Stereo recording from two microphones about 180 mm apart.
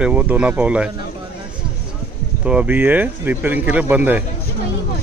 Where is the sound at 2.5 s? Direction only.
10° right (ahead or behind).